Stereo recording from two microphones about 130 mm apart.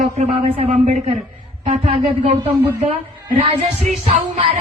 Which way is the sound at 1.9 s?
45° right (ahead or behind).